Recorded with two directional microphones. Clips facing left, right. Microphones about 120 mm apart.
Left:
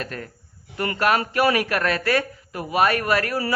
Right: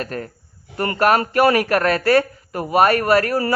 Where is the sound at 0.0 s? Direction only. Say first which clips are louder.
Right 5 dB; 40° right (ahead or behind).